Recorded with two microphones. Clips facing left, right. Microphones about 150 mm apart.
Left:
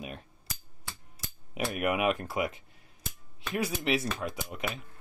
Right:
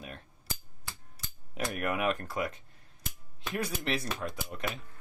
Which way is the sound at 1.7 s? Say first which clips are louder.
Left 3 dB; 15° left (ahead or behind).